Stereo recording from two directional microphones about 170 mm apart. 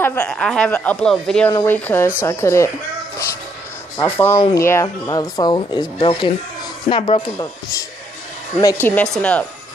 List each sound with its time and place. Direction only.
0.0 s speech: 10° left (ahead or behind)
4.0 s speech: 15° left (ahead or behind); by 7.2 s 30° left (ahead or behind)
8.5 s speech: 15° left (ahead or behind)